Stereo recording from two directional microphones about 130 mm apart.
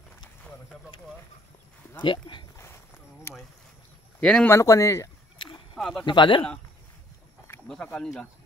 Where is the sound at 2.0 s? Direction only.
40° left (ahead or behind).